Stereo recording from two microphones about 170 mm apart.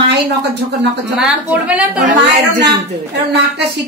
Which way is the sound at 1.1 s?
5° right (ahead or behind).